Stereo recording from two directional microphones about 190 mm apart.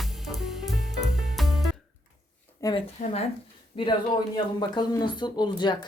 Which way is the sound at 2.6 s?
20° left (ahead or behind).